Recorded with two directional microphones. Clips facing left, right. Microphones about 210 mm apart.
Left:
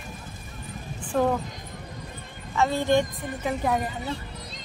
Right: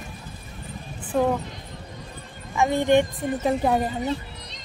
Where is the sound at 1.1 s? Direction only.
5° right (ahead or behind).